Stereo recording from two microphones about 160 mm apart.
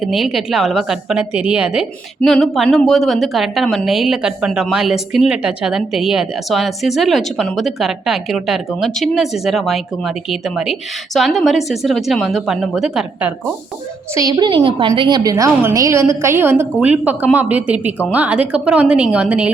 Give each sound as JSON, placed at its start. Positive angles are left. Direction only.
{"t": 0.0, "sound": "a woman's voice", "side_deg": 0}
{"t": 14.2, "sound": "a woman's voice", "side_deg": -25}